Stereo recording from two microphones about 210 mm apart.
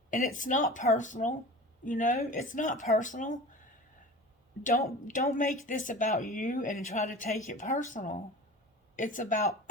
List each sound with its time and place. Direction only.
0.1 s speech: 40° left (ahead or behind)
4.9 s speech: 40° left (ahead or behind)